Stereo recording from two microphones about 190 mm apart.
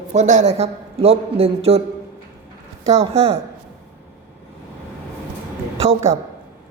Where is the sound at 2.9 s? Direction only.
30° right (ahead or behind).